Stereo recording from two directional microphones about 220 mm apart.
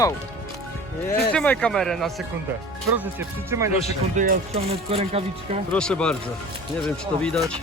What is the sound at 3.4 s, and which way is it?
Speech, 15° right (ahead or behind).